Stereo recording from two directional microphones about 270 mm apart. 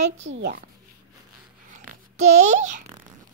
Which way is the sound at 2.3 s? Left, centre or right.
Right.